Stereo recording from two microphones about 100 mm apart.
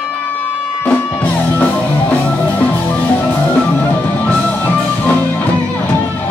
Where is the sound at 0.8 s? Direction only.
15° left (ahead or behind).